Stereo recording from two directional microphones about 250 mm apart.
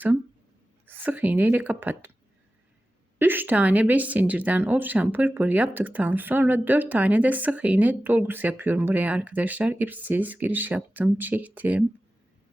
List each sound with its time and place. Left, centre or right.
0.9 s speech: centre
3.2 s speech: centre